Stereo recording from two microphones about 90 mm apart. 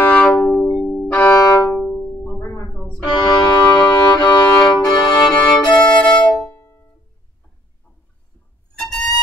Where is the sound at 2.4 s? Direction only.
30° left (ahead or behind).